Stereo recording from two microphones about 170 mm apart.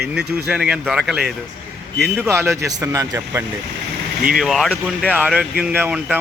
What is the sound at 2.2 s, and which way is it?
Speech, 15° right (ahead or behind).